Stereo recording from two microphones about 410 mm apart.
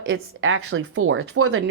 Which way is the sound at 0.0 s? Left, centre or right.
Right.